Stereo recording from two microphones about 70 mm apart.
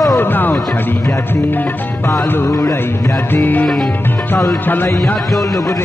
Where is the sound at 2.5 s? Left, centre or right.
Left.